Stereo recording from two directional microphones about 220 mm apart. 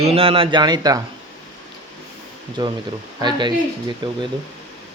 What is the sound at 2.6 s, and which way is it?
Speech, 20° right (ahead or behind).